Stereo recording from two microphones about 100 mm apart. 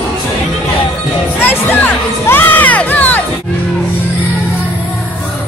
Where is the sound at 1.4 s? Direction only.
20° left (ahead or behind).